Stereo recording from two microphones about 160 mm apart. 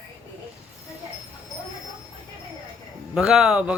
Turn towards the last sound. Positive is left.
turn(degrees=-5)  # may be behind; listen again after turning